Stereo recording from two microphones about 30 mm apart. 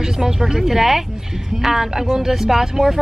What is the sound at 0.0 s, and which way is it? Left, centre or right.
Speech, centre.